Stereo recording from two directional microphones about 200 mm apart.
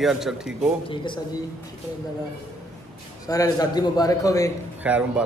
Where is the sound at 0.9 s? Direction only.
25° left (ahead or behind).